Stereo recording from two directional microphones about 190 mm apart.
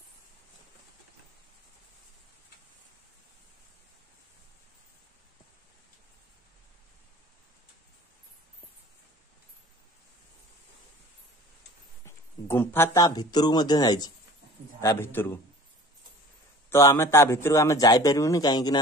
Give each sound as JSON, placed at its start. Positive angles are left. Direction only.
{"t": 12.0, "sound": "a man's voice", "side_deg": 10}
{"t": 16.7, "sound": "a man's voice", "side_deg": 15}